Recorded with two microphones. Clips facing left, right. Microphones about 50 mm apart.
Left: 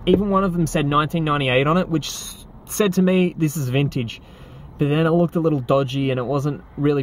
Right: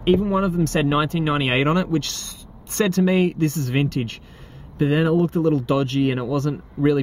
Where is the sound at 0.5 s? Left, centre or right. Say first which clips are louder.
Left 1 dB; centre.